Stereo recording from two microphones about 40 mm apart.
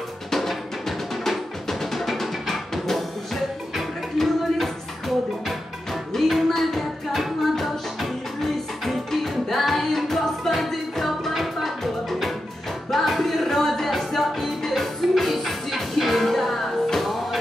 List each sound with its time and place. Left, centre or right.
0.3 s music: centre